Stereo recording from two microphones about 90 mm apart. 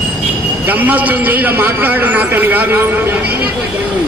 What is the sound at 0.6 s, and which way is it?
A man's voice, 20° right (ahead or behind).